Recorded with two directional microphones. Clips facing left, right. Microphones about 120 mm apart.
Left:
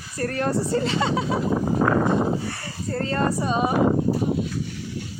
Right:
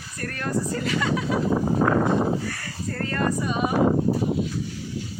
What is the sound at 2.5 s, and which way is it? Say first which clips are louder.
Speech: left 3 dB; 25° left (ahead or behind).